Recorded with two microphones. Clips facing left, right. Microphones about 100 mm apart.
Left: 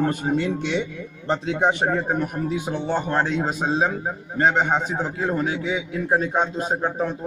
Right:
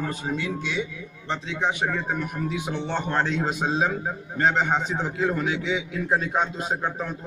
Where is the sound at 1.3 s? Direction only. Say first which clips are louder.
Left 6 dB; 45° left (ahead or behind).